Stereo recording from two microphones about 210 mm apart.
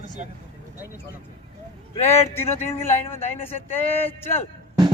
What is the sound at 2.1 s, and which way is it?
Speech, 10° left (ahead or behind).